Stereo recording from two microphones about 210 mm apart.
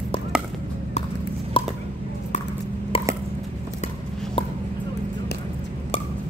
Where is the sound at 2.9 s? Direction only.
25° left (ahead or behind).